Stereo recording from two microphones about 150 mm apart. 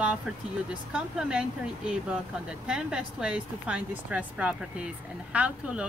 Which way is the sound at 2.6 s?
5° right (ahead or behind).